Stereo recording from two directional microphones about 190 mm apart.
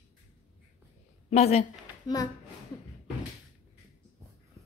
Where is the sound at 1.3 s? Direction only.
35° left (ahead or behind).